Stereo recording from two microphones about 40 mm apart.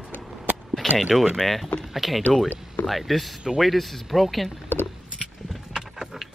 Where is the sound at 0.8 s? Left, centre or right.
Centre.